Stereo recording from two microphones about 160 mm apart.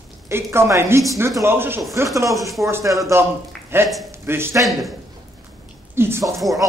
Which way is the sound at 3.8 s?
Centre (ahead or behind).